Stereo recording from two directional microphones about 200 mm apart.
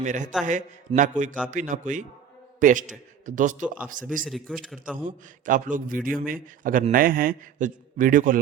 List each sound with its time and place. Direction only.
0.0 s a man's voice: 40° right (ahead or behind)
4.3 s a man's voice: centre (ahead or behind)
5.0 s a man's voice: 40° right (ahead or behind)